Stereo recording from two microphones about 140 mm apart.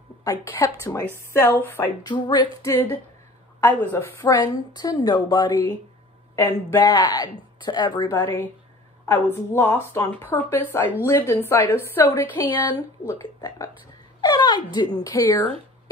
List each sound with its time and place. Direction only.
0.2 s a woman's voice: 25° left (ahead or behind)
2.0 s a woman's voice: 35° left (ahead or behind)
2.7 s a woman's voice: 15° left (ahead or behind); by 5.6 s 30° left (ahead or behind)
6.3 s speech: 15° left (ahead or behind)
6.8 s a woman's voice: 30° left (ahead or behind)
9.0 s a woman's voice: 15° left (ahead or behind)
12.7 s a woman's voice: 25° left (ahead or behind)